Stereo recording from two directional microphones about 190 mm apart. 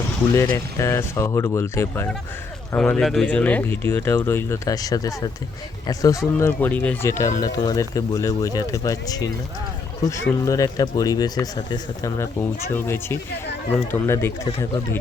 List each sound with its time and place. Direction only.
0.3 s speech: 15° left (ahead or behind)